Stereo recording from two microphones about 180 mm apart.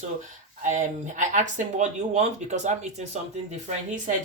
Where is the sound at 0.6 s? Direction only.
40° right (ahead or behind).